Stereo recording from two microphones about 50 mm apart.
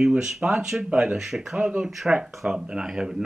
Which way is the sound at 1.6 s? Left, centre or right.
Centre.